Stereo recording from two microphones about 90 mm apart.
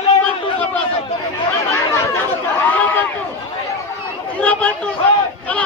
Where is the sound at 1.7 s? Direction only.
25° left (ahead or behind).